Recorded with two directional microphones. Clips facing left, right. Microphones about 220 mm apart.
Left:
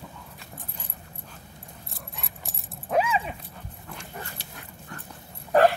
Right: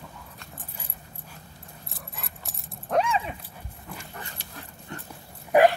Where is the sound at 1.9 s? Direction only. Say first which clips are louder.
Even; centre (ahead or behind).